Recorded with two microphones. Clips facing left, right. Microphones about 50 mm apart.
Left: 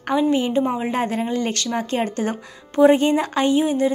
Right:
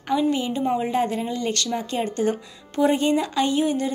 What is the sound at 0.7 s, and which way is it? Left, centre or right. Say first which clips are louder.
Speech: even; centre.